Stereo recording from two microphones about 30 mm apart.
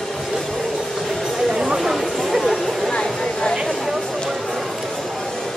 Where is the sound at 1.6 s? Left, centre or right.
Centre.